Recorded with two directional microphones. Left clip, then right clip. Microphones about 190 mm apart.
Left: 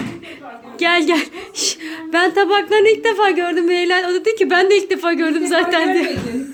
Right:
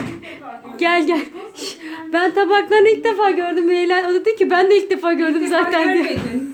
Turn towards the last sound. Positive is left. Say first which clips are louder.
# even
turn(degrees=0)  # may be behind; listen again after turning